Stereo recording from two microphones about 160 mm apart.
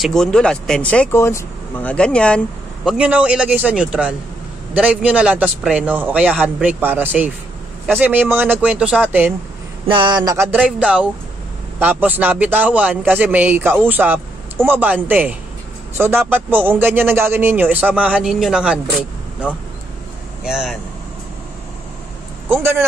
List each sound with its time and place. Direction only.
0.0 s speech: 5° left (ahead or behind)
3.0 s speech: 10° right (ahead or behind)
9.8 s a sound: 30° right (ahead or behind)
10.6 s speech: 5° right (ahead or behind)
22.5 s speech: 15° right (ahead or behind)